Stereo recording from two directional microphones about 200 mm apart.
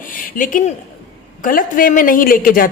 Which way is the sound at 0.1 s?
40° left (ahead or behind).